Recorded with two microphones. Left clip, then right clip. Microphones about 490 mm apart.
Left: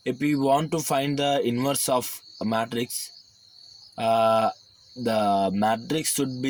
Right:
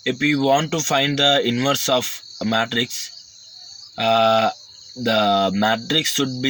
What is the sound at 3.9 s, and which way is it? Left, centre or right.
Speech, left.